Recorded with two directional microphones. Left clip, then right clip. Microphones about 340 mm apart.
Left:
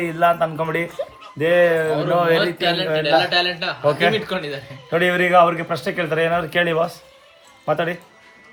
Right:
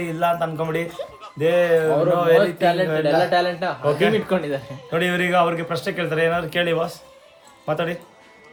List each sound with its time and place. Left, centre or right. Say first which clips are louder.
0.0 s speech: left 4 dB; left
2.6 s a man's voice: right 1 dB; centre
3.8 s a man's voice: left 2 dB; centre